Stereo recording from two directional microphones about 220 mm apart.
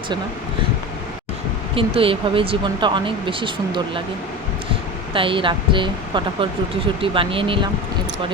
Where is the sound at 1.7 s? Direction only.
25° right (ahead or behind).